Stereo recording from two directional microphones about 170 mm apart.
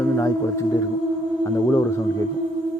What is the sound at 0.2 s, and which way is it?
Speech, 20° left (ahead or behind).